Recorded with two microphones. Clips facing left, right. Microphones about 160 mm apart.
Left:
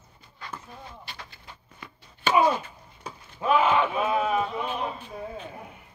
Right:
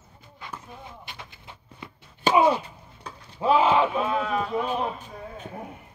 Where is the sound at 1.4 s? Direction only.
25° right (ahead or behind).